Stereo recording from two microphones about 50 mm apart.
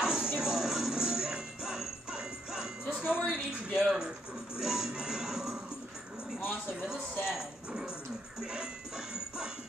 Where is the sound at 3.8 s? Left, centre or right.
Centre.